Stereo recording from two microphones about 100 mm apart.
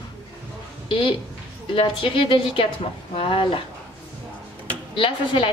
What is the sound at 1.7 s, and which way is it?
A woman's voice, 60° left (ahead or behind).